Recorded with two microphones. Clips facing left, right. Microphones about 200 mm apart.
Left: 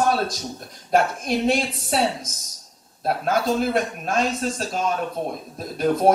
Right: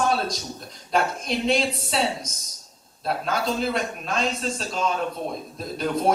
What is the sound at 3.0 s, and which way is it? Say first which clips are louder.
Speech: left 4 dB; 55° left (ahead or behind).